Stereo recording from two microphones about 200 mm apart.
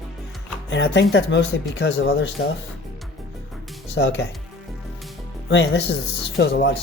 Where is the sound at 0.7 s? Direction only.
65° left (ahead or behind).